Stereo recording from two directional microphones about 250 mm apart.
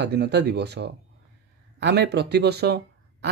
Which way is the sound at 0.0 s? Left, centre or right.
Right.